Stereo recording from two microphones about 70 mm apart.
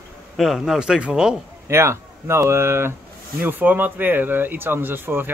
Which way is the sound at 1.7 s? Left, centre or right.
Right.